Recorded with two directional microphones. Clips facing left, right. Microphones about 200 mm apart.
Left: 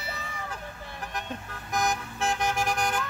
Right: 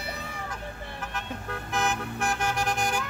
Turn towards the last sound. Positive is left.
turn(degrees=-5)  # may be behind; listen again after turning